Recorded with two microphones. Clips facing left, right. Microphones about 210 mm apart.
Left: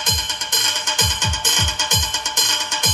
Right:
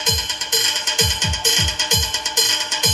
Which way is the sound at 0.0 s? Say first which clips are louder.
Right 3 dB; 55° left (ahead or behind).